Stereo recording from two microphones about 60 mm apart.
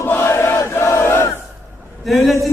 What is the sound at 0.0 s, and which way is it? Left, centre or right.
Crowd, left.